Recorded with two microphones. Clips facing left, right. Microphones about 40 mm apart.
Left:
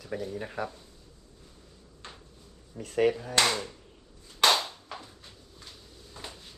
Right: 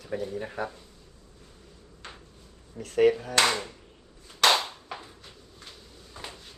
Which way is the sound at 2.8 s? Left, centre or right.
Right.